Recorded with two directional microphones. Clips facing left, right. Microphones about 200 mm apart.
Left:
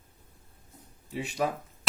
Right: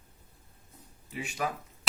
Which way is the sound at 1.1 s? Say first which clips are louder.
Left 5 dB; 35° left (ahead or behind).